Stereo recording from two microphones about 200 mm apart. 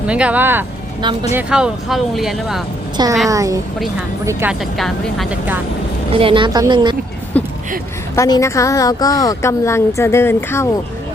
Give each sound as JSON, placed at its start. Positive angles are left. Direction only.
{"t": 0.1, "sound": "speech", "side_deg": -5}
{"t": 3.2, "sound": "speech", "side_deg": -15}
{"t": 4.8, "sound": "speech", "side_deg": 0}
{"t": 6.1, "sound": "speech", "side_deg": -25}
{"t": 7.3, "sound": "a sound", "side_deg": 5}
{"t": 8.1, "sound": "a woman's voice", "side_deg": 15}